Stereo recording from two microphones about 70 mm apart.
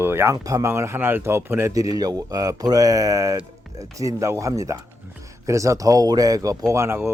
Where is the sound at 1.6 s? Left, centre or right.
Right.